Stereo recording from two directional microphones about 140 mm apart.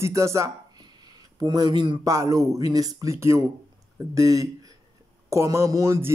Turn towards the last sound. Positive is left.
turn(degrees=-20)  # may be behind; listen again after turning